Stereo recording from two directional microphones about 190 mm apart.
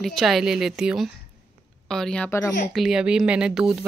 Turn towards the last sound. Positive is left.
turn(degrees=-5)  # may be behind; listen again after turning